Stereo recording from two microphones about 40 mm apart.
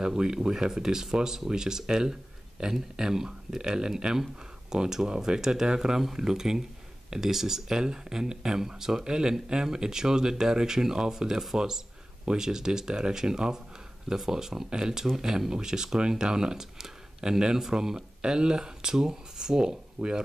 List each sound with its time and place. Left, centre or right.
0.0 s speech: centre